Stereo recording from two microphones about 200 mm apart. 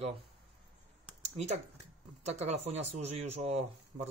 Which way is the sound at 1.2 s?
35° right (ahead or behind).